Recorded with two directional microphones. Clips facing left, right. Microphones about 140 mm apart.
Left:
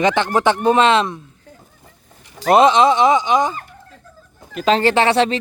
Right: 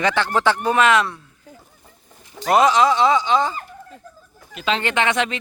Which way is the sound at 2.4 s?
25° left (ahead or behind).